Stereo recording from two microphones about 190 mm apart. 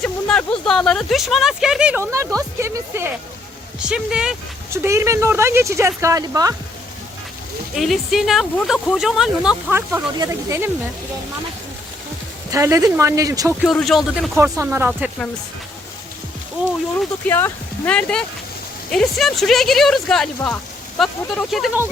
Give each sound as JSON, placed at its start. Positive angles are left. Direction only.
{"t": 0.0, "sound": "speech", "side_deg": 5}
{"t": 7.8, "sound": "speech", "side_deg": 0}
{"t": 12.5, "sound": "speech", "side_deg": -15}
{"t": 13.7, "sound": "speech", "side_deg": 0}
{"t": 14.3, "sound": "speech", "side_deg": -15}
{"t": 17.2, "sound": "speech", "side_deg": 10}